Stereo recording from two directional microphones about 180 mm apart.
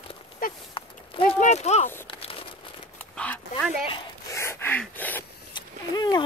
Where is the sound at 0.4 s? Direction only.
50° left (ahead or behind).